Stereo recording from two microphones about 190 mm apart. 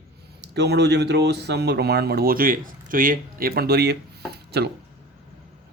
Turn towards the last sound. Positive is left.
turn(degrees=-60)  # may be behind; listen again after turning